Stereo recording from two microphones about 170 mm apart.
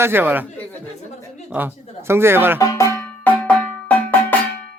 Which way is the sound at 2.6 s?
20° left (ahead or behind).